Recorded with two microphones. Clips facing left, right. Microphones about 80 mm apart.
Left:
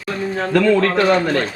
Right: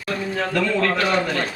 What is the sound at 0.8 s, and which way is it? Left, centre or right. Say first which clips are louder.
Speech: left 5 dB; left.